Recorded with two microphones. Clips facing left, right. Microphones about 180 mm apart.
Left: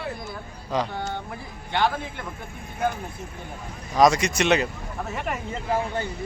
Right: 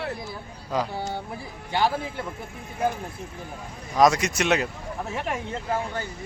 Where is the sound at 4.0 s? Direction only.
5° right (ahead or behind).